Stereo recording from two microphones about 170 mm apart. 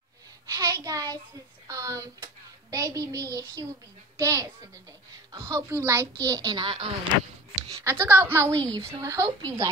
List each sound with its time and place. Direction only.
0.5 s a child's voice: 20° right (ahead or behind)
7.8 s a woman's voice: 15° right (ahead or behind)